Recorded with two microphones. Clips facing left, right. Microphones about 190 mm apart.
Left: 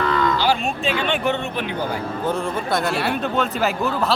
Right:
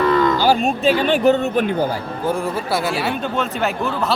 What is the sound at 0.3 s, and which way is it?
Speech, 40° right (ahead or behind).